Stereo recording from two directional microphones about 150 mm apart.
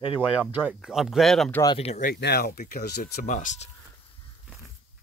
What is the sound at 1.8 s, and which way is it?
Speech, 45° left (ahead or behind).